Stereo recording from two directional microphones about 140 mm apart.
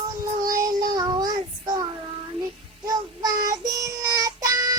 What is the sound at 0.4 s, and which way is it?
Child singing, 25° right (ahead or behind).